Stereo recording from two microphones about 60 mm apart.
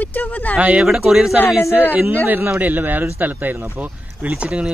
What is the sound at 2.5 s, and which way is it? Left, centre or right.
Speech, right.